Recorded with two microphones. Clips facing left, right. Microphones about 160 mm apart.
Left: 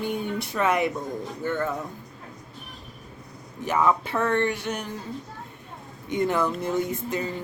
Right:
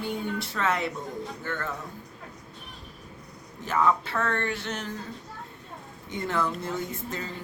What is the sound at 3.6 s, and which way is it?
Speech, 15° left (ahead or behind).